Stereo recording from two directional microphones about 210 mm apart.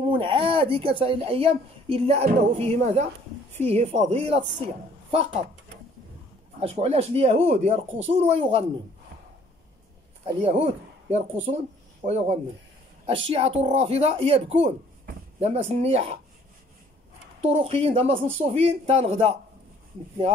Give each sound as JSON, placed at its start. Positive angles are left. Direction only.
{"t": 0.0, "sound": "a woman's voice", "side_deg": -25}
{"t": 6.6, "sound": "speech", "side_deg": -30}
{"t": 10.2, "sound": "a woman's voice", "side_deg": -30}
{"t": 17.4, "sound": "speech", "side_deg": -30}